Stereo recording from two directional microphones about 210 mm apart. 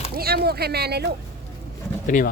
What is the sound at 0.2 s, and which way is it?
Speech, 50° right (ahead or behind).